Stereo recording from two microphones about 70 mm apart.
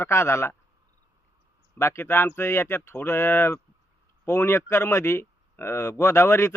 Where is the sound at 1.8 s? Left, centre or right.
Left.